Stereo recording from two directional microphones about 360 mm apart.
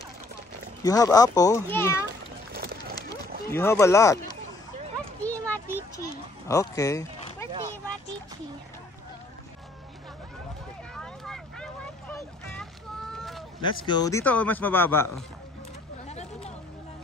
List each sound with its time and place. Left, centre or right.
0.8 s a child's voice: centre
2.5 s clip-clop: right
3.4 s a child's voice: centre
5.2 s a sound: centre
6.5 s speech: centre
11.0 s vehicle: centre
13.6 s a man's voice: centre
16.1 s a sound: centre